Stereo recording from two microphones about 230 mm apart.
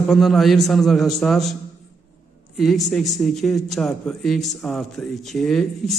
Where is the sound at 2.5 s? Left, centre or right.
Centre.